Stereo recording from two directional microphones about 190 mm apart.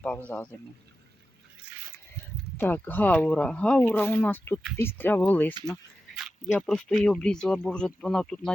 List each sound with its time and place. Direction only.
0.3 s speech: 5° left (ahead or behind)
2.6 s speech: 10° left (ahead or behind)